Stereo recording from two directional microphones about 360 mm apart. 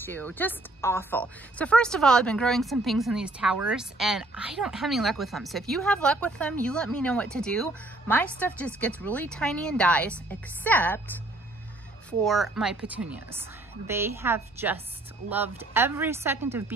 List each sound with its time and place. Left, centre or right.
0.0 s a woman's voice: centre
12.1 s a woman's voice: centre